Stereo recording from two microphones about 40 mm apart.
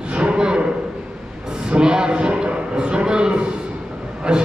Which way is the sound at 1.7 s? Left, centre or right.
Right.